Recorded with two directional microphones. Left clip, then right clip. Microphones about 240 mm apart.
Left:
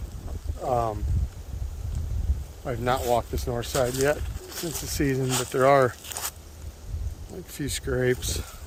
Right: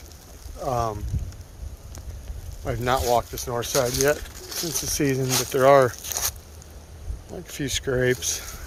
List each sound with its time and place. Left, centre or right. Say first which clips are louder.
0.6 s speech: even; centre
2.6 s speech: right 2 dB; centre
4.2 s a sound: right 3 dB; right
4.8 s speech: right 3 dB; centre
5.2 s speech: right 3 dB; right
5.5 s speech: right 3 dB; centre
6.0 s a sound: right 6 dB; right
7.4 s speech: right 5 dB; centre